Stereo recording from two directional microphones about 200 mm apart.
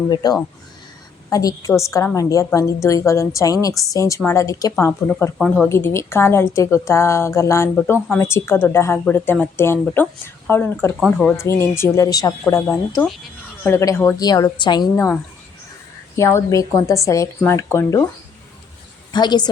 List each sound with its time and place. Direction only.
0.1 s a woman's voice: 20° left (ahead or behind)
19.1 s a woman's voice: 20° left (ahead or behind)